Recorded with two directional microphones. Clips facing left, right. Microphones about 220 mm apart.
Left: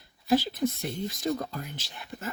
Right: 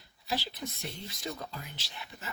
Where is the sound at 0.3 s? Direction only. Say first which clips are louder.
Left 12 dB; 50° left (ahead or behind).